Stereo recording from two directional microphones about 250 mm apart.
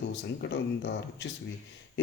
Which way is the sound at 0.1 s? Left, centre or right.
Left.